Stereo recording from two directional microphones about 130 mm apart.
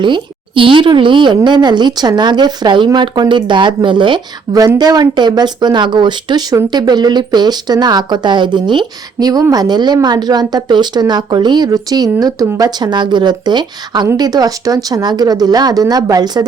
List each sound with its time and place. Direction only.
0.0 s speech: 40° right (ahead or behind)